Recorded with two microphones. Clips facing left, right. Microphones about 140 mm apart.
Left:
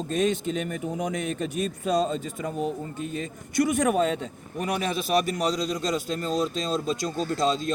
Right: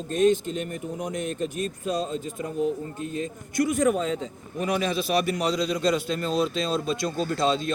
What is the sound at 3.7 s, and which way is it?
A man's voice, 70° left (ahead or behind).